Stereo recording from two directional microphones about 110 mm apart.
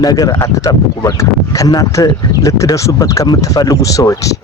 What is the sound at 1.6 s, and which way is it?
Speech, 35° left (ahead or behind).